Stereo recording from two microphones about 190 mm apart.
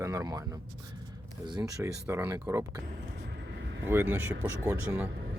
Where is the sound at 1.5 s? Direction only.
15° right (ahead or behind).